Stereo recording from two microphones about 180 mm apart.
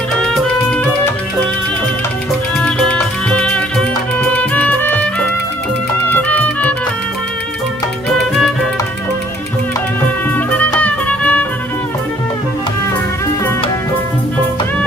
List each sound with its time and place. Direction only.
0.2 s music: 5° left (ahead or behind)
2.6 s music: 5° left (ahead or behind)
6.1 s music: 10° left (ahead or behind)
10.8 s music: 10° left (ahead or behind)